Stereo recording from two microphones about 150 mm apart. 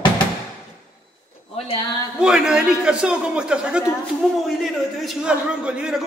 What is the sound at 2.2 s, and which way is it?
A man's voice, 5° right (ahead or behind).